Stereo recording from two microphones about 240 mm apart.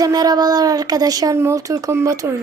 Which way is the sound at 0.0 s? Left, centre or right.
Centre.